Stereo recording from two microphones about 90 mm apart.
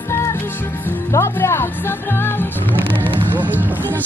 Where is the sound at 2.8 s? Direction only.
70° right (ahead or behind).